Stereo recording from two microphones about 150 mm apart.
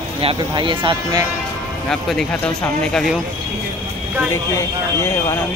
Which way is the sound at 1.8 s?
5° left (ahead or behind).